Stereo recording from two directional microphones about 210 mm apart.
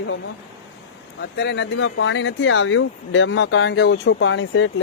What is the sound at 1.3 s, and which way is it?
Speech, 55° left (ahead or behind).